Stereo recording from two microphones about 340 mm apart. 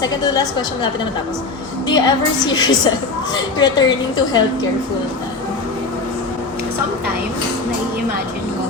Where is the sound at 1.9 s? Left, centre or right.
Centre.